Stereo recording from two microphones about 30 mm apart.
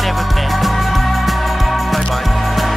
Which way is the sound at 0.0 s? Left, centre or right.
Centre.